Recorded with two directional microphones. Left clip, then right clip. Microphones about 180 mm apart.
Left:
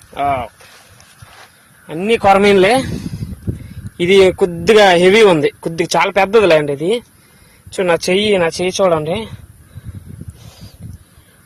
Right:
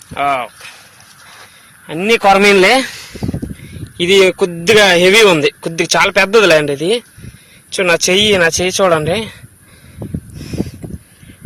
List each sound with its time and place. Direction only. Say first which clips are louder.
0.1 s speech: right 2 dB; 10° left (ahead or behind)
1.9 s speech: right 1 dB; centre (ahead or behind)
2.4 s speech: right 2 dB; 10° left (ahead or behind)
3.9 s speech: even; 30° left (ahead or behind); by 9.3 s 10° left (ahead or behind)